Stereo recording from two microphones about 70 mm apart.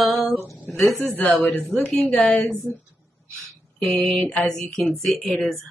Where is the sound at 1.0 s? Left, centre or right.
Left.